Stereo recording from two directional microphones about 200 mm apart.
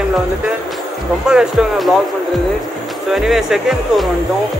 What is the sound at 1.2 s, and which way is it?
Speech, 5° right (ahead or behind).